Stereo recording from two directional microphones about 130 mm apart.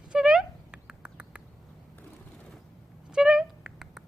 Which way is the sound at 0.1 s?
5° right (ahead or behind).